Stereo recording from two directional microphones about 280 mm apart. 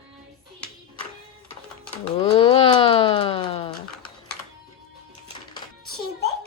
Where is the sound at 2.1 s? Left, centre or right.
Centre.